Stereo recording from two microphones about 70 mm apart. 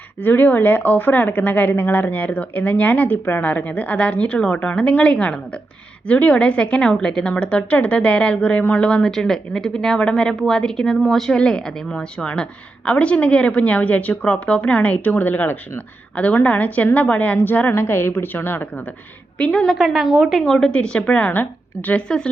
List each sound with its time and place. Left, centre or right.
0.2 s a woman's voice: left
19.4 s a woman's voice: centre
19.7 s a woman's voice: centre
20.5 s a woman's voice: centre